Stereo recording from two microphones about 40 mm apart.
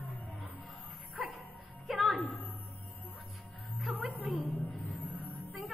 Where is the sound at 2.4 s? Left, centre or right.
Left.